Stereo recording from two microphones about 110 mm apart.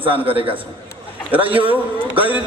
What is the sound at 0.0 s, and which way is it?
A man's voice, 55° right (ahead or behind).